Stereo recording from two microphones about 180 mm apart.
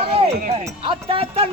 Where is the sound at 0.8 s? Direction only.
30° right (ahead or behind).